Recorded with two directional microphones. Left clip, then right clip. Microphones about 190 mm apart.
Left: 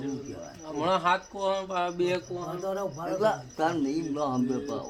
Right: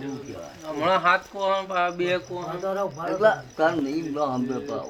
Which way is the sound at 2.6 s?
15° left (ahead or behind).